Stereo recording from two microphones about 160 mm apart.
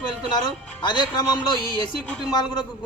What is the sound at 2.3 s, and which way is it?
Speech, 25° left (ahead or behind).